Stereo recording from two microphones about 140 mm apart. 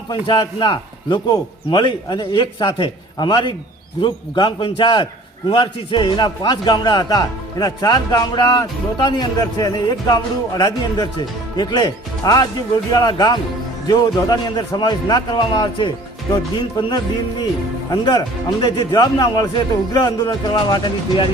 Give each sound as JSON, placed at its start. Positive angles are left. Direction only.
{"t": 0.1, "sound": "a man's voice", "side_deg": 35}